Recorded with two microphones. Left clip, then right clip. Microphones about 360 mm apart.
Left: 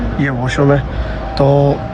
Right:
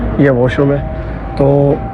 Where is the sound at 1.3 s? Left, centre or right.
Left.